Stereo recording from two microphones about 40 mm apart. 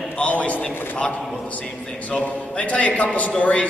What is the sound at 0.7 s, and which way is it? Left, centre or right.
Speech, left.